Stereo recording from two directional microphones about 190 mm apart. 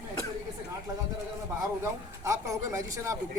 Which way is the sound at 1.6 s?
15° right (ahead or behind).